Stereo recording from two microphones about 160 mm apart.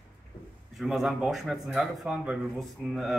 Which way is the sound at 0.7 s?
Centre (ahead or behind).